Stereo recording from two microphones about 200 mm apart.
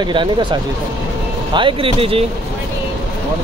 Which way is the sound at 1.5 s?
25° right (ahead or behind).